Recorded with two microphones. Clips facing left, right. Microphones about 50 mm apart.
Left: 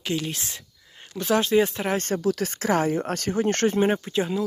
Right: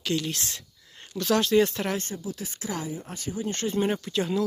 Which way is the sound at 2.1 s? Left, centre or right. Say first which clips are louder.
Left 11 dB; left.